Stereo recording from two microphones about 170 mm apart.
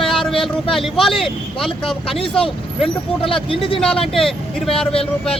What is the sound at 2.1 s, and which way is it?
Speech, 30° left (ahead or behind).